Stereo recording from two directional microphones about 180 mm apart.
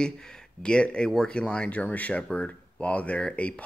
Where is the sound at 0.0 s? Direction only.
5° left (ahead or behind).